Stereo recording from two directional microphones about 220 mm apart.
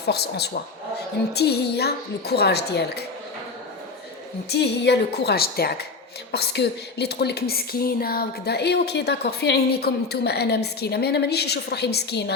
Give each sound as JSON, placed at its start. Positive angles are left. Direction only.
{"t": 0.0, "sound": "speech", "side_deg": 45}
{"t": 4.4, "sound": "speech", "side_deg": 50}